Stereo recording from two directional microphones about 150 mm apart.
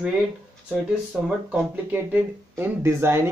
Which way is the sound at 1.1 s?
10° right (ahead or behind).